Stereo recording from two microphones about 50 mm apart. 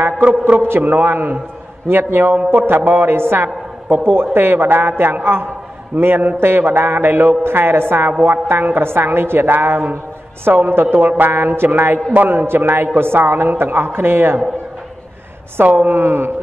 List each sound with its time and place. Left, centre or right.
0.6 s a woman's voice: right
0.8 s a man's voice: right
15.5 s a man's voice: right
15.9 s a woman's voice: right